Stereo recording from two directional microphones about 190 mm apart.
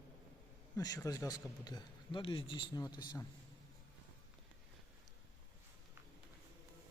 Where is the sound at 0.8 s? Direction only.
20° left (ahead or behind).